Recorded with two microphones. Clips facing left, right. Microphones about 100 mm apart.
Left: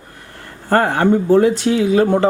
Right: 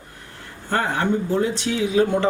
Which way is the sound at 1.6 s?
50° left (ahead or behind).